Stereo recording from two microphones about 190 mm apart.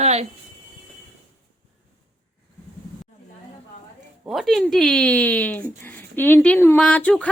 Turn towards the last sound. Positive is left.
turn(degrees=5)  # may be behind; listen again after turning